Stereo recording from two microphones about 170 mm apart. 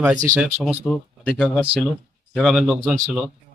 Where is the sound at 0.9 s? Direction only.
5° left (ahead or behind).